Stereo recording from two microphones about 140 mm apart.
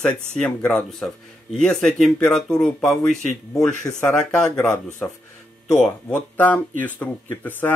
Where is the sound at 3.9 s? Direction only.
25° left (ahead or behind).